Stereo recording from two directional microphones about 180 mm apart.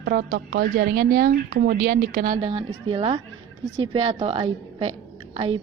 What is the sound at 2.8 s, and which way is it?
A woman's voice, 30° right (ahead or behind).